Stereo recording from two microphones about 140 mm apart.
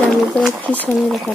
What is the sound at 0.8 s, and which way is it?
Speech, 5° right (ahead or behind).